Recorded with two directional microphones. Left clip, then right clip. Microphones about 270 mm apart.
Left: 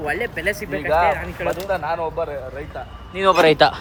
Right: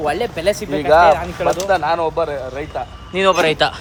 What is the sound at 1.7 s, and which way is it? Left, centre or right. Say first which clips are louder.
Speech: right 6 dB; right.